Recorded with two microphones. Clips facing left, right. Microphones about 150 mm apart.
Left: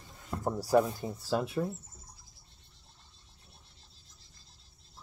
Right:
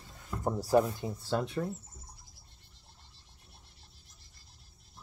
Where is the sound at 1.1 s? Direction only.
5° left (ahead or behind).